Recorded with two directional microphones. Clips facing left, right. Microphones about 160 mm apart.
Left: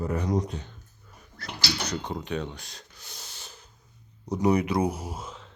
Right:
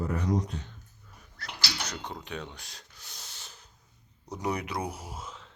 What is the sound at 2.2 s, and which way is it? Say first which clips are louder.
Speech: left 7 dB; 5° right (ahead or behind).